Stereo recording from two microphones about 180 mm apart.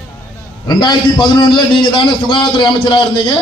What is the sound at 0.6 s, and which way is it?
Speech, 25° left (ahead or behind).